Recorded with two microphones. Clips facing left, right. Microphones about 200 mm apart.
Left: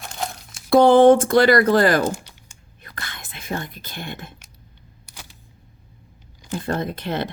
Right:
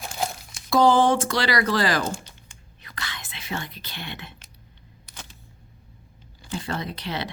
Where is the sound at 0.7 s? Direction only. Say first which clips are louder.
Left 7 dB; 60° left (ahead or behind).